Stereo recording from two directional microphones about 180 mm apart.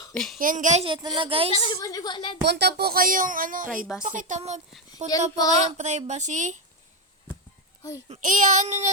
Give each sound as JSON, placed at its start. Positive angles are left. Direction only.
{"t": 0.1, "sound": "a child's voice", "side_deg": 5}
{"t": 0.3, "sound": "speech", "side_deg": -45}
{"t": 0.9, "sound": "speech", "side_deg": -30}
{"t": 1.5, "sound": "a woman's voice", "side_deg": 30}
{"t": 2.4, "sound": "speech", "side_deg": -65}
{"t": 7.8, "sound": "a child's voice", "side_deg": 15}
{"t": 8.0, "sound": "speech", "side_deg": -40}